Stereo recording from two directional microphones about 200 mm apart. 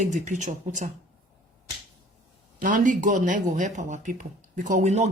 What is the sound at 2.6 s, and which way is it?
Speech, 40° right (ahead or behind).